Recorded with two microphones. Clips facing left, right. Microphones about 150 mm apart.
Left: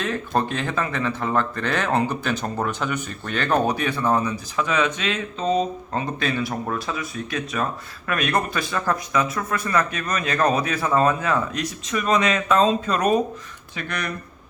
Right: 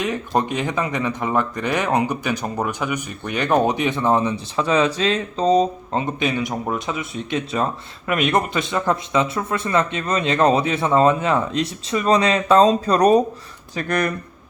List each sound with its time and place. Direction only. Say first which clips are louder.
0.0 s speech: right 2 dB; 15° right (ahead or behind); by 5.6 s 35° right (ahead or behind)
5.9 s speech: right 3 dB; 20° right (ahead or behind); by 14.1 s 45° right (ahead or behind)